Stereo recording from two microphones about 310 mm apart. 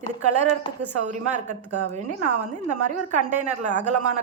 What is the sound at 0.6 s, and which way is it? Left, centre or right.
Speech, centre.